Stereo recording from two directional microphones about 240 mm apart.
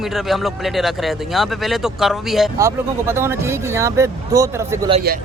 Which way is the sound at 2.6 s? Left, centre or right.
Centre.